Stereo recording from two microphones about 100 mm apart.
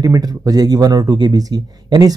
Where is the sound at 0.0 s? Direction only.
35° right (ahead or behind).